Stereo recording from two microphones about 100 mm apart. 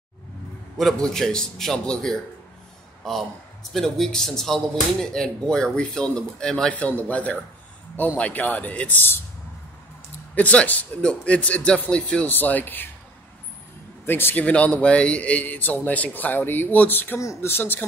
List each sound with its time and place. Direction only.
0.7 s a man's voice: 5° left (ahead or behind)
3.0 s a sound: 5° left (ahead or behind)
3.7 s a man's voice: 5° left (ahead or behind); by 9.2 s 20° left (ahead or behind)
10.3 s a man's voice: 15° left (ahead or behind)
14.0 s a man's voice: 20° left (ahead or behind)